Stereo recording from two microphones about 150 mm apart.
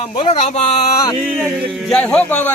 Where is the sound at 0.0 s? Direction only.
45° left (ahead or behind).